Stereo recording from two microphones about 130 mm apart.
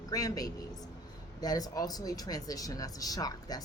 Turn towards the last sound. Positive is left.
turn(degrees=30)  # may be behind; listen again after turning